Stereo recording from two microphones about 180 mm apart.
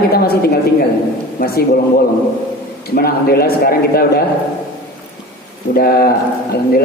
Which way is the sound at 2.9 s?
60° left (ahead or behind).